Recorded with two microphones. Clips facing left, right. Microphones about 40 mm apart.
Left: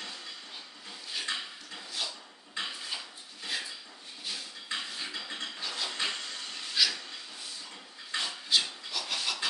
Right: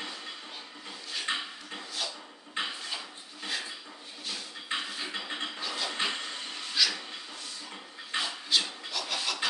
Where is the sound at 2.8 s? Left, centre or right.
Centre.